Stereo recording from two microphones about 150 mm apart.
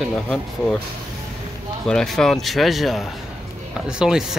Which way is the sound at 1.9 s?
5° left (ahead or behind).